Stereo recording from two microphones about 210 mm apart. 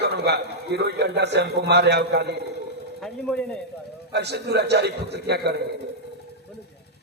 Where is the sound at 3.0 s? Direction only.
5° left (ahead or behind).